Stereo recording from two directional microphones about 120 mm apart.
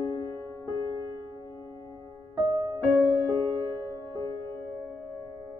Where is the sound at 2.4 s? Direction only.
35° right (ahead or behind).